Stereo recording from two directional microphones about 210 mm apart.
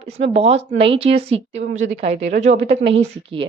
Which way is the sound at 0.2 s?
30° right (ahead or behind).